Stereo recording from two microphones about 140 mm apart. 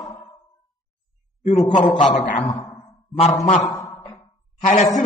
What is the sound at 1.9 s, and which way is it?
A man's voice, 50° left (ahead or behind).